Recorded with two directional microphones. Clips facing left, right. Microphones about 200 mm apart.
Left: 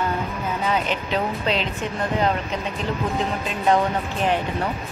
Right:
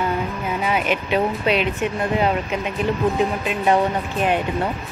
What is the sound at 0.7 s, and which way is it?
Speech, 15° right (ahead or behind).